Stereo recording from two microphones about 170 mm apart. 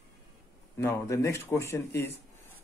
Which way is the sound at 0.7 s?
15° left (ahead or behind).